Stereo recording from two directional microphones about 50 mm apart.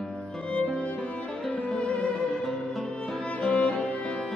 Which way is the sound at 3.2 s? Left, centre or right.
Left.